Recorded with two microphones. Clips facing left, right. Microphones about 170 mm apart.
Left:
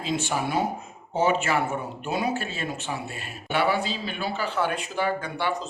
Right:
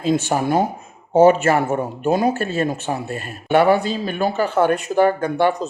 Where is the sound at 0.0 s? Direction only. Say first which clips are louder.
Right 8 dB; 45° right (ahead or behind).